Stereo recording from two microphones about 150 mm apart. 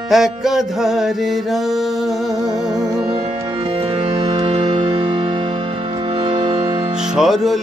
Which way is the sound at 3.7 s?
45° right (ahead or behind).